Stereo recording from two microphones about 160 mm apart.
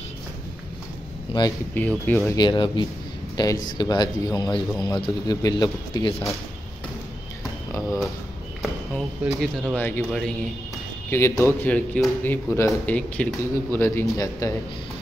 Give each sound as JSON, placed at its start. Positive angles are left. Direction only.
{"t": 1.3, "sound": "a sound", "side_deg": 35}
{"t": 1.8, "sound": "speech", "side_deg": 10}
{"t": 2.3, "sound": "a man's voice", "side_deg": 30}
{"t": 8.6, "sound": "speech", "side_deg": 0}
{"t": 11.1, "sound": "speech", "side_deg": 20}